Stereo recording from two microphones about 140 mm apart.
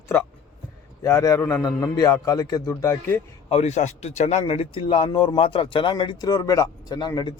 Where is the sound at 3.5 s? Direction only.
55° left (ahead or behind).